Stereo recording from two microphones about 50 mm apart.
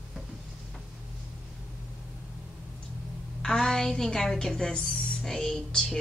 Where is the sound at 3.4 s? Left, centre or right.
Centre.